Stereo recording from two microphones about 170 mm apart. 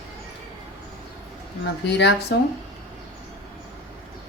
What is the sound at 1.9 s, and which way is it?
Speech, 85° left.